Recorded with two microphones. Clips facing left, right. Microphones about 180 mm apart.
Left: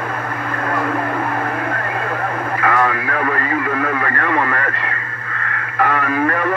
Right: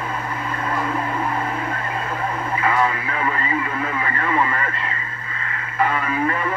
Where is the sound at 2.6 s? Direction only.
60° left (ahead or behind).